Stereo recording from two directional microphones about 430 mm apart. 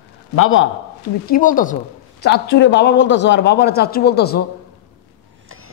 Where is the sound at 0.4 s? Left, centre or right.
Left.